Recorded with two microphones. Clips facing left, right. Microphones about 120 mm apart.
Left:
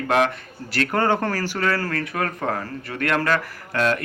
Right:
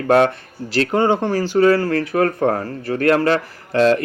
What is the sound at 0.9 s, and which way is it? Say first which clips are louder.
Speech: right 4 dB; 20° right (ahead or behind).